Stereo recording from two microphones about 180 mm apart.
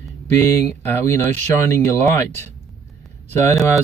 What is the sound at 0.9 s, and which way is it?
Speech, 10° left (ahead or behind).